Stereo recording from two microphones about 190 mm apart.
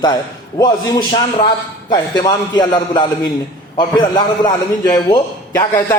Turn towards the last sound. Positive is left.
turn(degrees=20)  # may be behind; listen again after turning